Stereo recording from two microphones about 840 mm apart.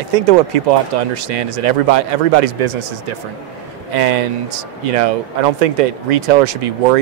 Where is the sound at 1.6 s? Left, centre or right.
Right.